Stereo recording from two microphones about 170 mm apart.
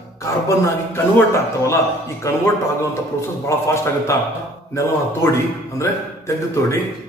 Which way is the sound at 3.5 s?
15° left (ahead or behind).